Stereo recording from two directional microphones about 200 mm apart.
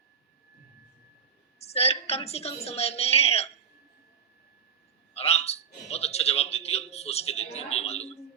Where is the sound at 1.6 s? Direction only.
30° left (ahead or behind).